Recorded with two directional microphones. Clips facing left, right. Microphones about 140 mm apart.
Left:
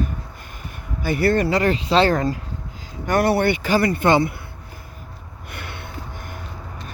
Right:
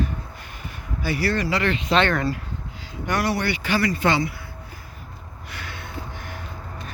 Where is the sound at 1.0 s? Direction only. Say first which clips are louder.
Left 5 dB; 50° left (ahead or behind); by 2.3 s 35° left (ahead or behind).